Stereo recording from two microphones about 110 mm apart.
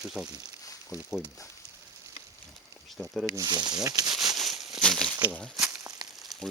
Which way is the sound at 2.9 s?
Centre (ahead or behind).